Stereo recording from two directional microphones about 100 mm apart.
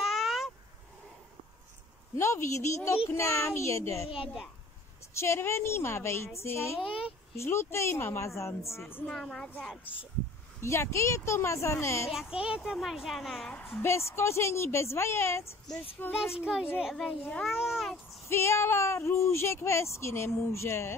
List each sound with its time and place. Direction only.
0.0 s a sound: centre (ahead or behind)
2.1 s speech: 30° left (ahead or behind)
5.1 s speech: 25° left (ahead or behind)
9.0 s a child's voice: 5° left (ahead or behind)
10.6 s speech: 30° left (ahead or behind)
12.1 s a child's voice: 5° right (ahead or behind)
13.7 s a child's voice: 25° left (ahead or behind)
16.4 s a child's voice: 10° right (ahead or behind)
18.3 s speech: 25° left (ahead or behind)